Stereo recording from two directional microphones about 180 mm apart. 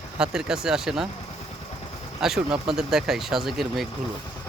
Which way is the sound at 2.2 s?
5° right (ahead or behind).